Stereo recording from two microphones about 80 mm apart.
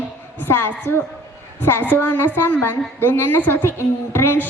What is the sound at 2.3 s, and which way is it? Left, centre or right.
A woman's voice, left.